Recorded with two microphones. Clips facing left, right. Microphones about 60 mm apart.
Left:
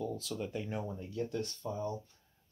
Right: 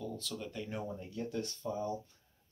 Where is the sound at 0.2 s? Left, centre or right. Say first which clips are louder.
Left 3 dB; centre.